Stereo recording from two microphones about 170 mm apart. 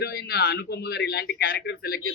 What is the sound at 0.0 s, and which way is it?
A man's voice, 70° left (ahead or behind).